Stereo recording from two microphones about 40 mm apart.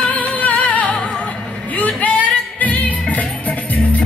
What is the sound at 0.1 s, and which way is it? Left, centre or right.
Music, left.